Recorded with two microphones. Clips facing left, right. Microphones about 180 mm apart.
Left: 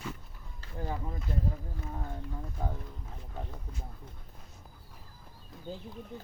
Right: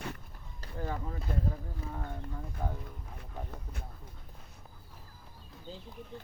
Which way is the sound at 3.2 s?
65° right (ahead or behind).